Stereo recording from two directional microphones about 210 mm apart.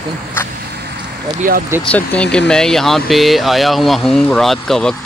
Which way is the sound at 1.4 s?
40° right (ahead or behind).